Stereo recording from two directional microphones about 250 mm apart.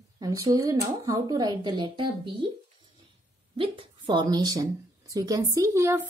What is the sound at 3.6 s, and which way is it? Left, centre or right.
A woman's voice, centre.